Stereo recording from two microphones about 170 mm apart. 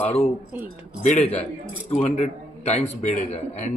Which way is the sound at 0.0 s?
35° left (ahead or behind).